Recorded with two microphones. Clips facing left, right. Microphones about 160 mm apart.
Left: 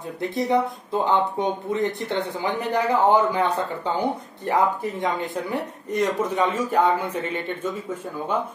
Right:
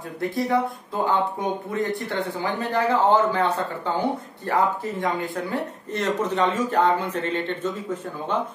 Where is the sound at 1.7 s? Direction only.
20° left (ahead or behind).